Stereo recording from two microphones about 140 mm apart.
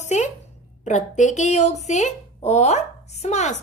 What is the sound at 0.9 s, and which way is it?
Speech, 60° left (ahead or behind).